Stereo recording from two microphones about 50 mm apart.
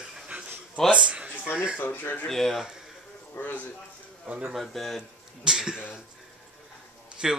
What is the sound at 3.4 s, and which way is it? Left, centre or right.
Speech, left.